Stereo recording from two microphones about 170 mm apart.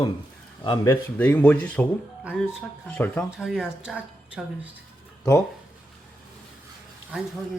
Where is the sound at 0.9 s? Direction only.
10° left (ahead or behind).